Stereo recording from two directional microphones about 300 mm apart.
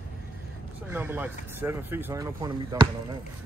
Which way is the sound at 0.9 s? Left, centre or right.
Centre.